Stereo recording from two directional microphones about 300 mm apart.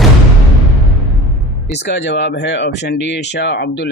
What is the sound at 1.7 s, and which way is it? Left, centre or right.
Speech, left.